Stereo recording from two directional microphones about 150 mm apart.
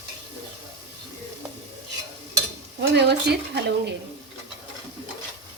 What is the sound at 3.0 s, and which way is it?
Speech, 90° right.